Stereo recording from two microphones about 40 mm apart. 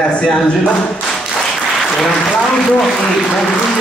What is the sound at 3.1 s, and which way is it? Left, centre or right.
Speech, centre.